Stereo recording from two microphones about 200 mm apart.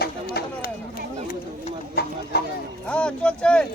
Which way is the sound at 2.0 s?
50° left (ahead or behind).